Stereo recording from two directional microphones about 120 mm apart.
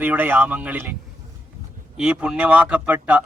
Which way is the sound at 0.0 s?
15° right (ahead or behind).